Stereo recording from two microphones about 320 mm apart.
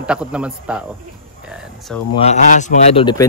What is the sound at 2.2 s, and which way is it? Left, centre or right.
A man's voice, left.